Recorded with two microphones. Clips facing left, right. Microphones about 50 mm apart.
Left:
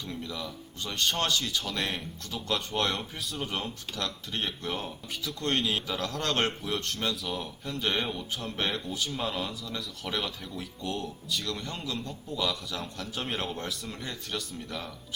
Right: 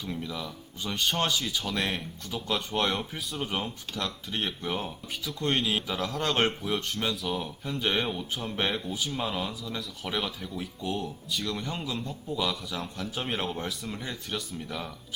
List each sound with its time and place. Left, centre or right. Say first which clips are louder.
0.0 s speech: right 2 dB; centre